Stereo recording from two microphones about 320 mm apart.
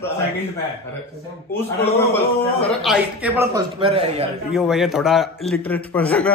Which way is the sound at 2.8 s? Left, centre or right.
Centre.